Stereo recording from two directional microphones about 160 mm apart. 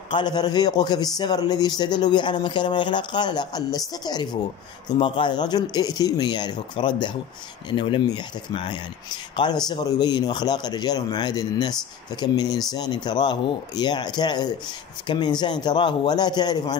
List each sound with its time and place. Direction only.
0.1 s speech: 25° left (ahead or behind)